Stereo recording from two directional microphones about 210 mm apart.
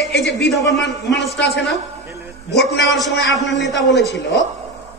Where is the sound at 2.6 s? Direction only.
60° left (ahead or behind).